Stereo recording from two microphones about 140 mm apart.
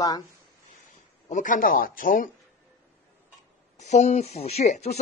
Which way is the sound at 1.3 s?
70° left (ahead or behind).